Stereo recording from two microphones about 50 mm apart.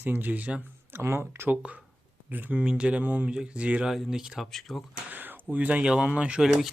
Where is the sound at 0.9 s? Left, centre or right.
Right.